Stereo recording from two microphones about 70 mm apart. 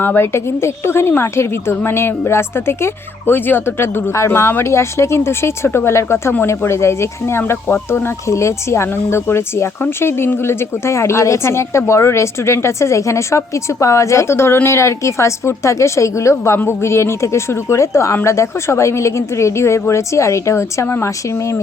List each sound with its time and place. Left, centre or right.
0.0 s a woman's voice: left
20.8 s speech: left